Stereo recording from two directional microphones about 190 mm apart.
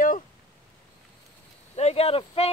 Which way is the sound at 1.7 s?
35° left (ahead or behind).